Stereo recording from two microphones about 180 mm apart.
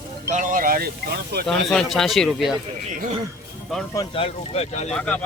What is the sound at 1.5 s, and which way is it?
Speech, centre (ahead or behind).